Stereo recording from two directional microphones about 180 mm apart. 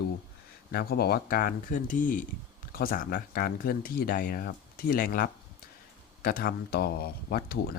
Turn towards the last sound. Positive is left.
turn(degrees=60)  # may be behind; listen again after turning